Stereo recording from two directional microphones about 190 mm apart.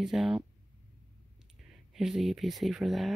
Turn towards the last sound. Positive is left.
turn(degrees=0)  # may be behind; listen again after turning